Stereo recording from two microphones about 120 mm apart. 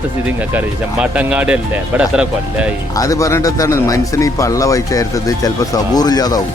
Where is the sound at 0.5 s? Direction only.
10° right (ahead or behind).